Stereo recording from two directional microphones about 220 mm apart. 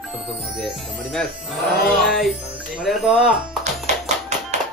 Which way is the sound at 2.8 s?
Centre (ahead or behind).